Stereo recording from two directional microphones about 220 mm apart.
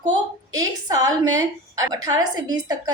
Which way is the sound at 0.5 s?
15° right (ahead or behind).